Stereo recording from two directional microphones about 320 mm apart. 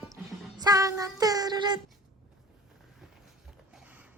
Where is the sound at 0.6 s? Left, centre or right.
Centre.